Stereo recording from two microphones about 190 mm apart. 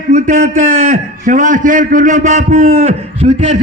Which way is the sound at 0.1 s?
40° right (ahead or behind).